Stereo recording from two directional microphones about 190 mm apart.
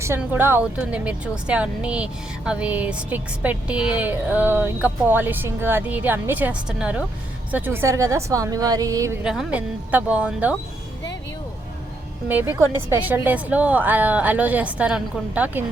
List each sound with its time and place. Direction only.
0.0 s speech: 10° right (ahead or behind)
9.2 s speech: centre (ahead or behind)
12.3 s speech: 10° right (ahead or behind)